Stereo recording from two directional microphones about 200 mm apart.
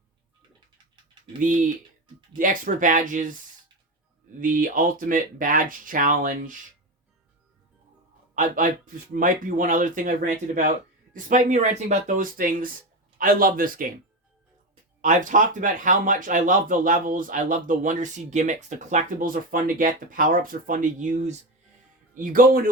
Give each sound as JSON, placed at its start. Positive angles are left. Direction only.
{"t": 2.4, "sound": "speech", "side_deg": -40}
{"t": 4.4, "sound": "speech", "side_deg": -40}
{"t": 8.4, "sound": "speech", "side_deg": -40}
{"t": 15.0, "sound": "speech", "side_deg": -40}